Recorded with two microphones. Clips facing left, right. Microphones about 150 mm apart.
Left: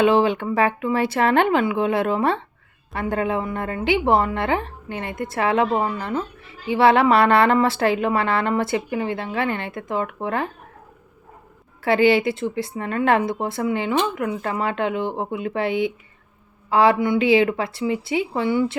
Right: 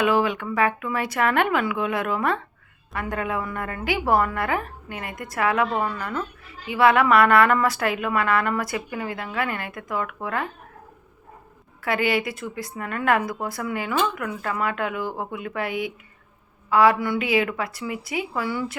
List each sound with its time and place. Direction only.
0.0 s a woman's voice: 25° left (ahead or behind)
11.8 s a woman's voice: 30° left (ahead or behind)